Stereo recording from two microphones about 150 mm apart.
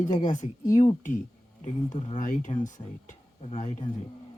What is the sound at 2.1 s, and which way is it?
Speech, 60° left (ahead or behind).